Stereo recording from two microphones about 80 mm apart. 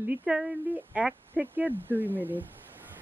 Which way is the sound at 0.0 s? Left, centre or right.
Centre.